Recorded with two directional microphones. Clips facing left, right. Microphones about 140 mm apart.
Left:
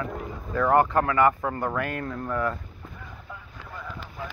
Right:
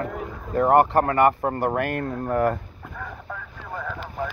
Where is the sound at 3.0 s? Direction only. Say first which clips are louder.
Right 10 dB; 60° right (ahead or behind).